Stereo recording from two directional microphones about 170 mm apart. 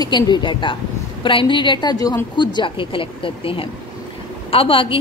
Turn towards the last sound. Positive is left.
turn(degrees=30)  # may be behind; listen again after turning